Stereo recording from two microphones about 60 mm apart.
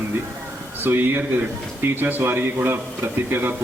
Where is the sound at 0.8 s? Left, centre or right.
Right.